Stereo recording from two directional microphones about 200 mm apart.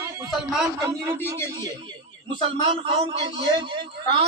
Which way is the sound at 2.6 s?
25° right (ahead or behind).